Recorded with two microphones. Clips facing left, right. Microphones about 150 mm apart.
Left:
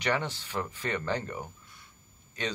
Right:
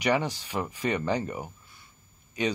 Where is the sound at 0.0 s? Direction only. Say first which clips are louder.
Right 4 dB; 10° right (ahead or behind).